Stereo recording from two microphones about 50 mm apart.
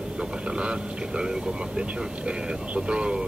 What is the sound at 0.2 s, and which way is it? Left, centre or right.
Speech, right.